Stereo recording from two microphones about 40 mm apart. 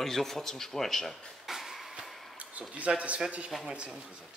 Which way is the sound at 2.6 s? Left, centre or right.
Right.